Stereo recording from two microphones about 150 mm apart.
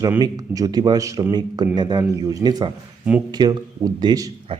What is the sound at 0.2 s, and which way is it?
Speech, 25° right (ahead or behind).